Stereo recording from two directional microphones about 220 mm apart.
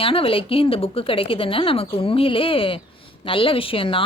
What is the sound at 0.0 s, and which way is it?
A woman's voice, 25° left (ahead or behind).